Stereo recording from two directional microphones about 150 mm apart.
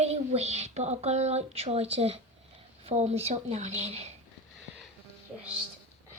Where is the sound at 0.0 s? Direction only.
45° right (ahead or behind).